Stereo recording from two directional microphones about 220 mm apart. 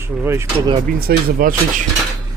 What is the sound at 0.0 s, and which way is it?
Speech, 10° right (ahead or behind).